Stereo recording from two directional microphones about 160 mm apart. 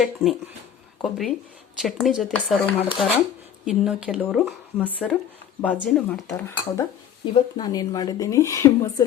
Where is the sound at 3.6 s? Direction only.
5° right (ahead or behind).